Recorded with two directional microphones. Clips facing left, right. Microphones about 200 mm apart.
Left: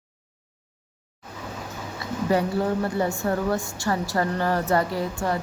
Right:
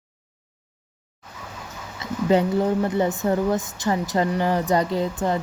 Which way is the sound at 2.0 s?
20° right (ahead or behind).